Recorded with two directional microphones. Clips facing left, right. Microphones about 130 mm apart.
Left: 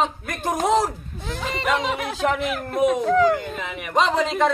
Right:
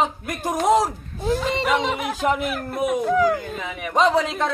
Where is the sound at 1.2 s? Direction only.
35° right (ahead or behind).